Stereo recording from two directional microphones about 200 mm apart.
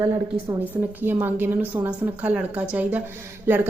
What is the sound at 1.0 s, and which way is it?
A woman's voice, 10° right (ahead or behind).